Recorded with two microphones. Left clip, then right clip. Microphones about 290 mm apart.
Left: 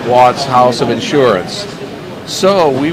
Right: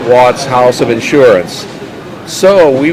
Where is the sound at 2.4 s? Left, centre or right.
Right.